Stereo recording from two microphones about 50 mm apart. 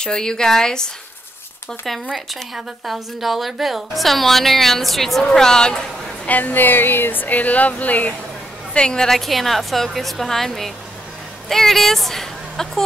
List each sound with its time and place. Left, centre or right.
0.0 s speech: centre
1.9 s a woman's voice: centre
6.2 s speech: left
8.7 s speech: centre
9.1 s a woman's voice: centre